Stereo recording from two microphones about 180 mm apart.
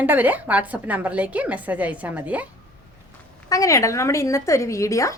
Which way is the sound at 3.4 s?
20° left (ahead or behind).